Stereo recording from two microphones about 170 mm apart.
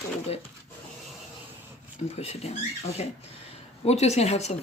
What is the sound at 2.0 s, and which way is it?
A woman's voice, 40° left (ahead or behind).